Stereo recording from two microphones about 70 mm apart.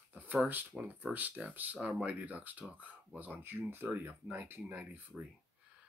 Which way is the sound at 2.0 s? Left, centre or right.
Right.